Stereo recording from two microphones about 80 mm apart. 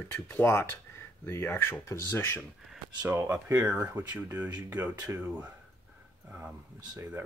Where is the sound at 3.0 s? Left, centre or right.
Right.